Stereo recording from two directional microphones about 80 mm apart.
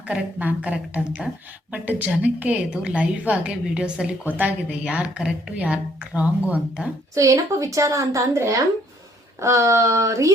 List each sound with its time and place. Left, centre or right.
0.1 s a woman's voice: centre
7.1 s a woman's voice: right